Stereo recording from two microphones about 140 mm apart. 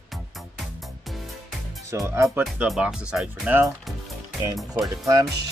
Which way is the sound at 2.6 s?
5° right (ahead or behind).